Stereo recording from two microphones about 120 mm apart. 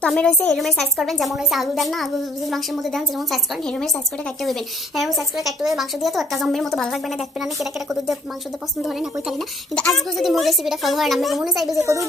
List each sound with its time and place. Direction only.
0.0 s a woman's voice: 5° left (ahead or behind)
9.8 s a woman's voice: centre (ahead or behind)
11.7 s a woman's voice: 25° right (ahead or behind)